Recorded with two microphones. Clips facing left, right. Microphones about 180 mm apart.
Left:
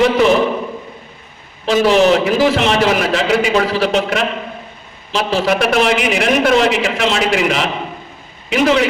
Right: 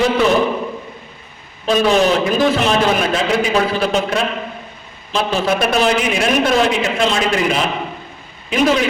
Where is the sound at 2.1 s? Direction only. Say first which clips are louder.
Left 2 dB; 75° left (ahead or behind).